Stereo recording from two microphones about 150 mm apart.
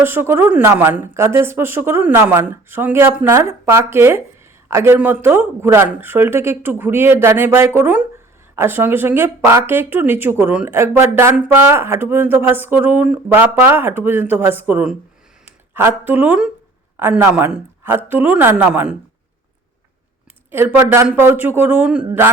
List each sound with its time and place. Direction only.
0.0 s speech: 15° right (ahead or behind)
20.5 s speech: 15° right (ahead or behind)